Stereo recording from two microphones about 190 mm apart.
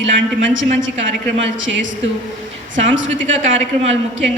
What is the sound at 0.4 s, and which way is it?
Speech, 80° right.